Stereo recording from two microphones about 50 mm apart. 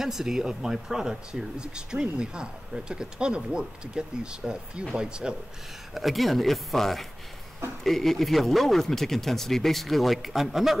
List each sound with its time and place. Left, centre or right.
0.0 s speech: centre
5.9 s speech: centre